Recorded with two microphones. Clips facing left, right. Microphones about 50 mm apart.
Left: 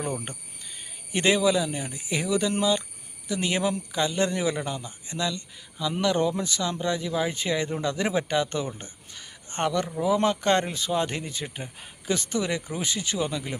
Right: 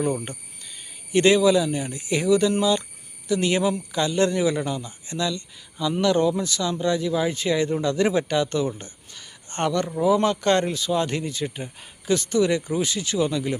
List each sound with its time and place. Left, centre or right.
1.1 s speech: centre